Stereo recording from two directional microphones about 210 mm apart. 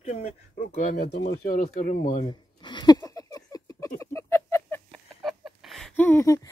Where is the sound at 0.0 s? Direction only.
35° left (ahead or behind).